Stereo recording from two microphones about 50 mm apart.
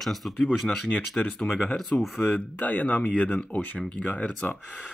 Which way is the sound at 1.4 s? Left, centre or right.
Left.